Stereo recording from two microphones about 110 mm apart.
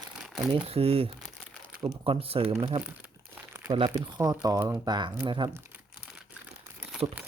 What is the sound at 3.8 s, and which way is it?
Speech, 40° right (ahead or behind).